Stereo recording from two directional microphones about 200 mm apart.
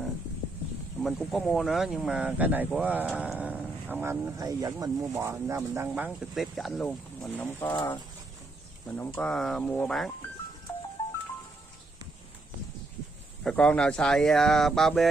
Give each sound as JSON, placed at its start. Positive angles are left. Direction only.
{"t": 1.0, "sound": "speech", "side_deg": 0}
{"t": 7.6, "sound": "speech", "side_deg": 25}
{"t": 8.8, "sound": "speech", "side_deg": 10}
{"t": 13.4, "sound": "speech", "side_deg": 5}